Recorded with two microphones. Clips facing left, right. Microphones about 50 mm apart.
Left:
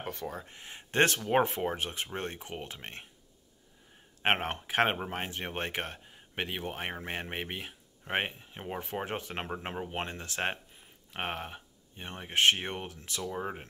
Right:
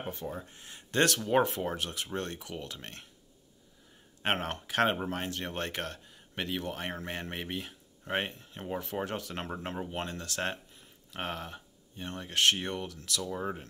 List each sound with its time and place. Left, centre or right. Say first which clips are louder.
0.0 s a sound: even; left
0.3 s speech: right 1 dB; left
0.7 s speech: left 1 dB; left
4.2 s speech: left 2 dB; left